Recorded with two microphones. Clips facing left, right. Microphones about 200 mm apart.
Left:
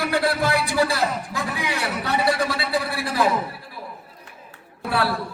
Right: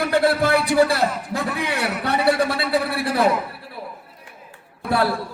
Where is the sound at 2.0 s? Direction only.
60° right (ahead or behind).